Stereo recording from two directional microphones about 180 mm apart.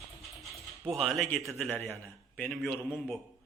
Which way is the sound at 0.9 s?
Centre (ahead or behind).